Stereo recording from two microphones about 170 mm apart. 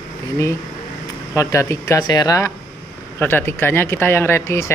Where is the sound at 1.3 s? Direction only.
20° left (ahead or behind).